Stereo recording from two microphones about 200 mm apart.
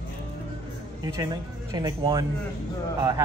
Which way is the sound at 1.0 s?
20° right (ahead or behind).